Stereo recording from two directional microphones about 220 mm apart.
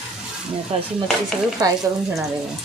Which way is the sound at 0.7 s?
30° right (ahead or behind).